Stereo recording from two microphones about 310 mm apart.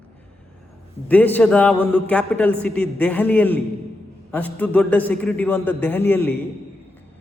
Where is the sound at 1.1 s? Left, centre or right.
Centre.